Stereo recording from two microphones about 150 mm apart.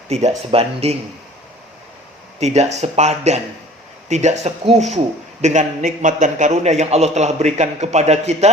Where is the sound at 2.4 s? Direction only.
45° right (ahead or behind).